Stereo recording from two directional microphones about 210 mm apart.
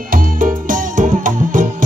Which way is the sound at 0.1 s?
40° right (ahead or behind).